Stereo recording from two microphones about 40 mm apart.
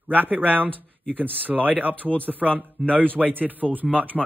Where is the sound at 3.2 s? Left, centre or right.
Right.